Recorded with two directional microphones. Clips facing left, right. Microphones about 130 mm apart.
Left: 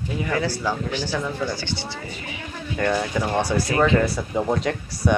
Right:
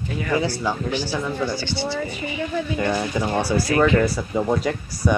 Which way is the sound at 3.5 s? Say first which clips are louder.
Right 3 dB; 25° left (ahead or behind).